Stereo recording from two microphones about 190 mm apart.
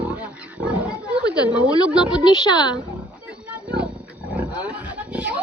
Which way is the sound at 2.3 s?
20° left (ahead or behind).